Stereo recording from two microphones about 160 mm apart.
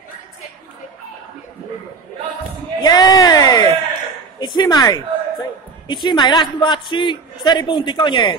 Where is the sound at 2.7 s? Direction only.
25° left (ahead or behind).